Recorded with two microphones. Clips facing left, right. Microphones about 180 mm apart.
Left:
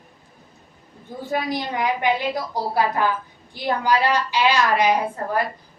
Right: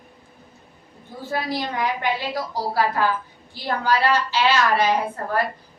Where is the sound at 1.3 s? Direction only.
20° left (ahead or behind).